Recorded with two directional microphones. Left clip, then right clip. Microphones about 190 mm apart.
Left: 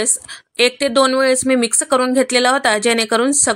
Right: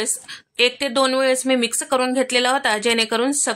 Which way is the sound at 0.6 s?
15° left (ahead or behind).